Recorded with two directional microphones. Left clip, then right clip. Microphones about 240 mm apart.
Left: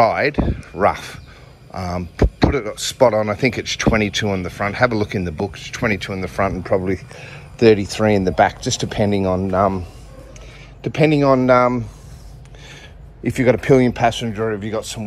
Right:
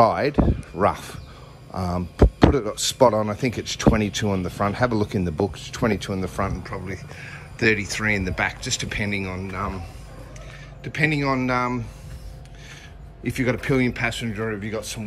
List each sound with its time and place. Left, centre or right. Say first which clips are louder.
0.0 s speech: left 3 dB; centre
6.7 s speech: left 14 dB; centre
10.8 s speech: left 7 dB; centre
13.2 s speech: left 8 dB; centre